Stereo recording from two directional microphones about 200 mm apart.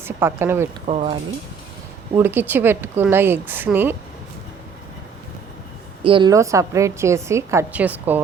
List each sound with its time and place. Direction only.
0.0 s a woman's voice: 10° right (ahead or behind)
0.9 s speech: 35° right (ahead or behind)
2.1 s a woman's voice: 10° right (ahead or behind)
6.0 s a woman's voice: 25° right (ahead or behind); by 8.2 s 10° right (ahead or behind)